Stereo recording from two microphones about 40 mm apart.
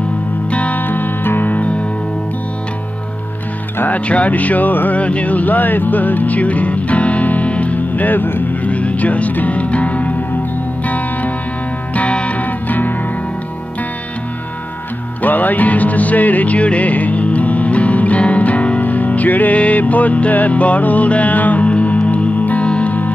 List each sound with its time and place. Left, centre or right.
0.5 s music: left
0.8 s music: left
3.9 s speech: left
5.0 s speech: left
8.6 s music: left
11.9 s music: left
15.2 s music: left
22.7 s music: left